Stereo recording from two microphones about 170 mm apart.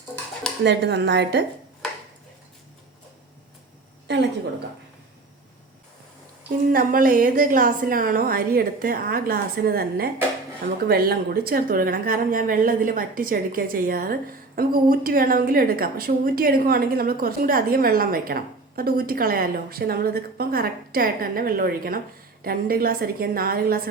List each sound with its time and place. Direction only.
0.6 s speech: 85° right
4.1 s a woman's voice: 90° right
6.7 s a woman's voice: 55° right (ahead or behind)